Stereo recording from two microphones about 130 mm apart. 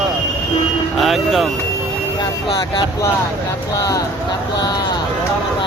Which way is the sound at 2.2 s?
35° left (ahead or behind).